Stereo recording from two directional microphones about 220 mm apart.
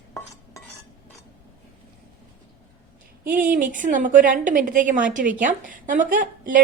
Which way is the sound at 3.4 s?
40° right (ahead or behind).